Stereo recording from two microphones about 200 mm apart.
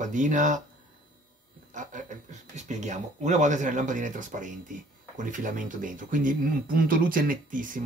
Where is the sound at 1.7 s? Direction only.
40° right (ahead or behind).